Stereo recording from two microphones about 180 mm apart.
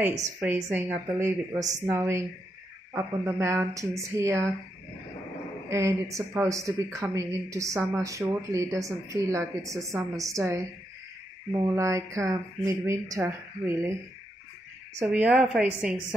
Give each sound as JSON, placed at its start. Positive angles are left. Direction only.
{"t": 0.4, "sound": "speech", "side_deg": -10}
{"t": 5.7, "sound": "speech", "side_deg": -15}
{"t": 15.0, "sound": "speech", "side_deg": -10}